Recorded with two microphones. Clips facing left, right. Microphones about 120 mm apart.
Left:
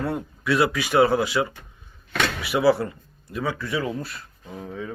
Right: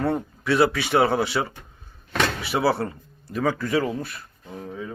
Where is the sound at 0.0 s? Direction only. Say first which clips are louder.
Right 3 dB; 25° right (ahead or behind).